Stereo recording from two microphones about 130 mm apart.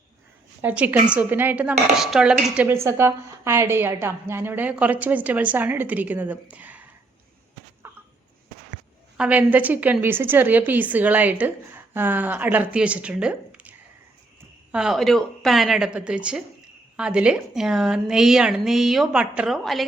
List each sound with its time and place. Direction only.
0.6 s a woman's voice: 10° right (ahead or behind)
2.6 s a woman's voice: 20° right (ahead or behind)
7.8 s chicken: 15° right (ahead or behind)
9.1 s a woman's voice: 10° right (ahead or behind)